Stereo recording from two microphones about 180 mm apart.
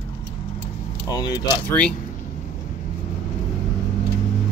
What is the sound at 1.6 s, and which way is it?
Speech, 5° left (ahead or behind).